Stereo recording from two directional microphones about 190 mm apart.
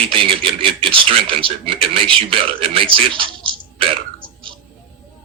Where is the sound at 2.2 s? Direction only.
30° right (ahead or behind).